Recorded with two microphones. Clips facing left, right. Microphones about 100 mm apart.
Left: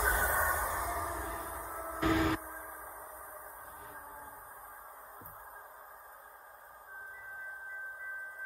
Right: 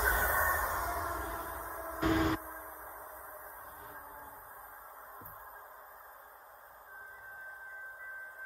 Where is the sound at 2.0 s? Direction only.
30° right (ahead or behind).